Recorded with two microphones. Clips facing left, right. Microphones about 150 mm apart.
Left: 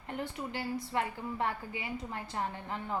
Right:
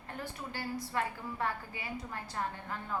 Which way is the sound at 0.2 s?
20° left (ahead or behind).